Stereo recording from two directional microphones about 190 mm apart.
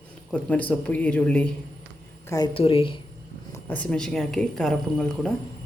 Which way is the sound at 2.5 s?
30° left (ahead or behind).